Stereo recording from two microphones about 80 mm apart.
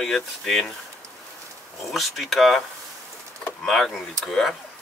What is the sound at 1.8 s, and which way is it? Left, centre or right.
Speech, centre.